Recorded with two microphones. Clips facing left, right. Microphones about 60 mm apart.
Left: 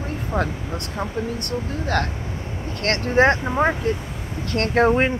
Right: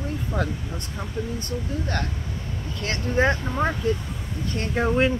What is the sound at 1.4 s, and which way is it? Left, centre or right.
Speech, left.